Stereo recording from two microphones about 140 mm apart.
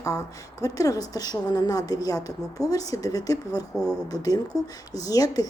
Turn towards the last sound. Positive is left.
turn(degrees=25)  # may be behind; listen again after turning